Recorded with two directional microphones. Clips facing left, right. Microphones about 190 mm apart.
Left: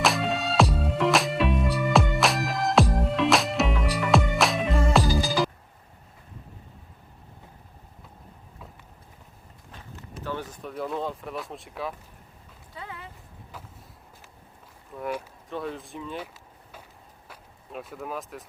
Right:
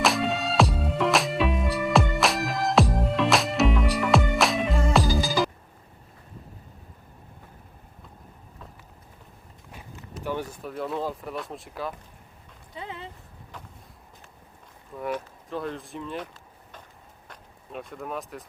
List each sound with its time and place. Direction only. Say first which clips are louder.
0.0 s music: right 1 dB; centre (ahead or behind)
10.2 s speech: right 3 dB; 10° right (ahead or behind)
12.7 s speech: right 3 dB; 20° right (ahead or behind)
14.9 s speech: right 1 dB; centre (ahead or behind)